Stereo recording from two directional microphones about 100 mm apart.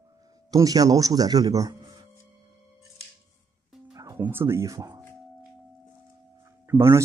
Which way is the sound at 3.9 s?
35° right (ahead or behind).